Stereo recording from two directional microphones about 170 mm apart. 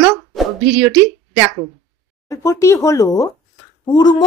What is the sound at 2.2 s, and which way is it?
Speech, 15° left (ahead or behind).